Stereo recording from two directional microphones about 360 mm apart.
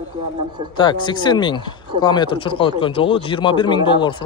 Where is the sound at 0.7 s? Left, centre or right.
Centre.